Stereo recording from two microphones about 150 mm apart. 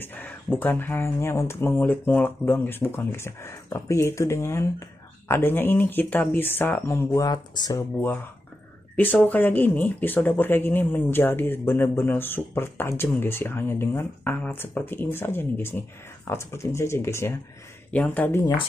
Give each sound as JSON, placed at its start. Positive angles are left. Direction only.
{"t": 0.0, "sound": "speech", "side_deg": 15}
{"t": 7.2, "sound": "speech", "side_deg": 25}
{"t": 8.9, "sound": "speech", "side_deg": 10}